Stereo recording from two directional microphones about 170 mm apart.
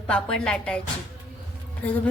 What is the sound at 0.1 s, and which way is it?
Speech, 5° left (ahead or behind).